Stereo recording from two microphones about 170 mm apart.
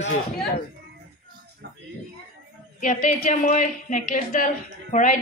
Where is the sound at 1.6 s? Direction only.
75° right (ahead or behind).